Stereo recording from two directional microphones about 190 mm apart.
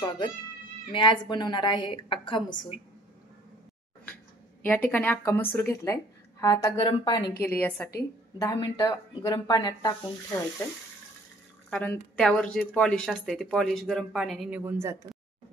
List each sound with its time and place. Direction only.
0.9 s speech: 25° left (ahead or behind)
4.6 s a woman's voice: 10° left (ahead or behind)
8.4 s speech: 20° left (ahead or behind)
11.7 s speech: 5° left (ahead or behind)
14.6 s speech: 10° right (ahead or behind)